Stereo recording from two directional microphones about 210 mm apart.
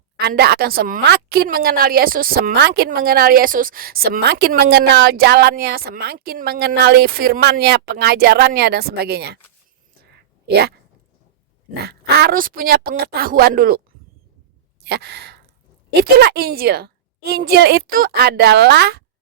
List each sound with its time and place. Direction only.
0.2 s a woman's voice: 50° right (ahead or behind)
10.4 s speech: 50° right (ahead or behind)
11.9 s a woman's voice: 50° right (ahead or behind)
14.8 s sigh: 50° right (ahead or behind)
16.1 s a woman's voice: 50° right (ahead or behind)